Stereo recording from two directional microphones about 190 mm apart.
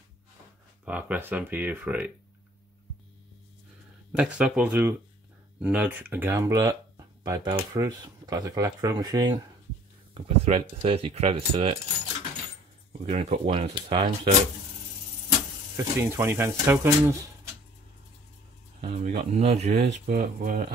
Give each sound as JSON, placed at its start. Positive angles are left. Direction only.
{"t": 0.8, "sound": "speech", "side_deg": -5}
{"t": 4.1, "sound": "speech", "side_deg": -5}
{"t": 10.1, "sound": "speech", "side_deg": -30}
{"t": 13.0, "sound": "speech", "side_deg": -30}
{"t": 15.7, "sound": "speech", "side_deg": -15}
{"t": 18.8, "sound": "speech", "side_deg": -30}
{"t": 20.1, "sound": "speech", "side_deg": -50}